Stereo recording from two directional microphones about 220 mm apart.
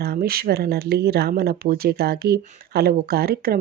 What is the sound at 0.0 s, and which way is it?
Speech, 45° right (ahead or behind).